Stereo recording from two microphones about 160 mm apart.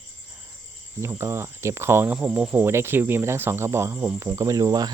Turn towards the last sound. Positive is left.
turn(degrees=-25)  # may be behind; listen again after turning